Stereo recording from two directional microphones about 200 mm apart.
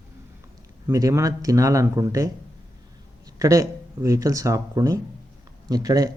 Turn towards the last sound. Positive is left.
turn(degrees=-20)  # may be behind; listen again after turning